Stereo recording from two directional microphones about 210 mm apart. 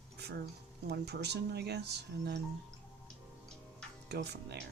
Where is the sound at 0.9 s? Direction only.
50° right (ahead or behind).